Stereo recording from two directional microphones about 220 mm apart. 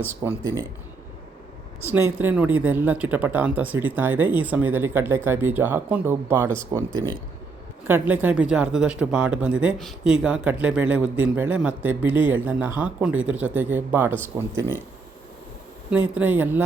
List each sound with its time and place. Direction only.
0.0 s speech: 10° right (ahead or behind)
1.9 s speech: 10° right (ahead or behind)
15.9 s speech: 5° right (ahead or behind)